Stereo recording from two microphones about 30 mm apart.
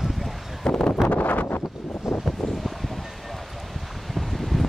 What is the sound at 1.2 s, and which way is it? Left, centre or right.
Wind noise, left.